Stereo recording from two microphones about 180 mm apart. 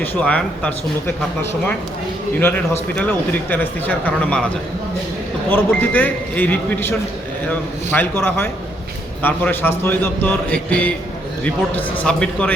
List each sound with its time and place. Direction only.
0.0 s a man's voice: 5° left (ahead or behind)
2.9 s a man's voice: 10° left (ahead or behind)
5.5 s a man's voice: 10° left (ahead or behind)